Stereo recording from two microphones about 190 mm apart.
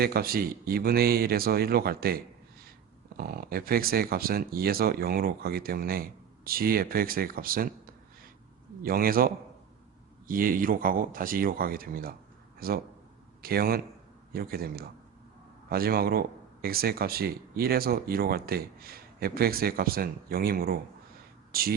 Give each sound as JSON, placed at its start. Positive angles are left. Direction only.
{"t": 0.0, "sound": "speech", "side_deg": -50}
{"t": 8.8, "sound": "speech", "side_deg": -50}